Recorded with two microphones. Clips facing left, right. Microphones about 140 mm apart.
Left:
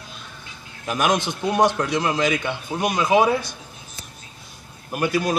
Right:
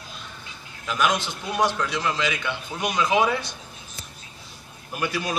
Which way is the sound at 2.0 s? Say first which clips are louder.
Left 4 dB; 50° left (ahead or behind).